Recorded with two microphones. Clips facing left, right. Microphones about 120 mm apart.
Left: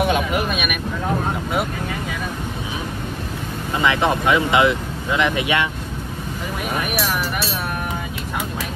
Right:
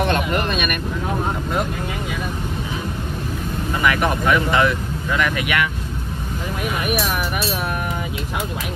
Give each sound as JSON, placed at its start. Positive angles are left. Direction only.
{"t": 0.0, "sound": "vehicle", "side_deg": 5}
{"t": 3.7, "sound": "speech", "side_deg": 20}